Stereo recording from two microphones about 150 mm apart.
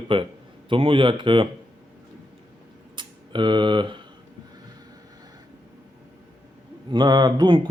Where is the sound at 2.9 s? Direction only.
30° right (ahead or behind).